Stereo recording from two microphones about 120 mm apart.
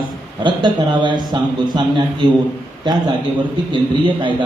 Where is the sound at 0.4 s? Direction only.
40° right (ahead or behind).